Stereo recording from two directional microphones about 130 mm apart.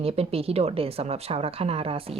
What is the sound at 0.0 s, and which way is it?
Speech, 50° right (ahead or behind).